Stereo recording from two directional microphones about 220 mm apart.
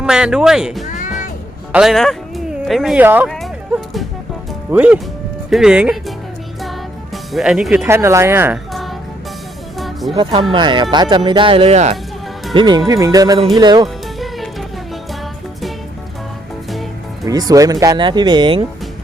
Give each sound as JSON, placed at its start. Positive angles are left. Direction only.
{"t": 0.0, "sound": "speech", "side_deg": -5}
{"t": 0.9, "sound": "music", "side_deg": 35}
{"t": 1.7, "sound": "speech", "side_deg": 0}
{"t": 4.7, "sound": "speech", "side_deg": -5}
{"t": 6.6, "sound": "music", "side_deg": 0}
{"t": 7.9, "sound": "speech", "side_deg": -10}
{"t": 9.7, "sound": "music", "side_deg": 0}
{"t": 10.5, "sound": "speech", "side_deg": -20}
{"t": 13.8, "sound": "music", "side_deg": 0}
{"t": 17.2, "sound": "speech", "side_deg": -15}